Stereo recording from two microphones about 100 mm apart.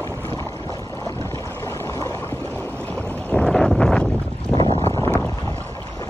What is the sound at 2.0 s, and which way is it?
Boat, 20° left (ahead or behind).